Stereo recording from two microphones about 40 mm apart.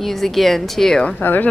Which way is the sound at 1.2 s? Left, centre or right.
Left.